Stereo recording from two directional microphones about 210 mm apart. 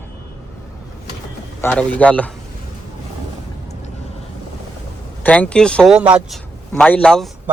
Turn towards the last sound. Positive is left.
turn(degrees=5)  # may be behind; listen again after turning